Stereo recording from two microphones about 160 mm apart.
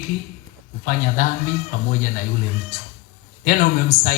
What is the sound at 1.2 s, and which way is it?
Speech, 60° left (ahead or behind).